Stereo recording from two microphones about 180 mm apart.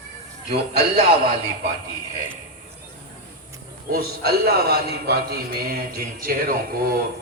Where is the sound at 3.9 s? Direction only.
60° right (ahead or behind).